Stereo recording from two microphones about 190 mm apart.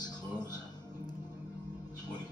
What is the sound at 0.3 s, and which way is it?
Music, 20° left (ahead or behind).